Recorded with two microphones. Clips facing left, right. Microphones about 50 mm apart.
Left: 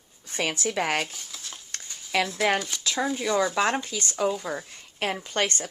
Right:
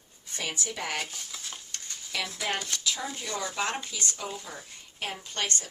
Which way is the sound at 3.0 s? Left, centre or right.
Left.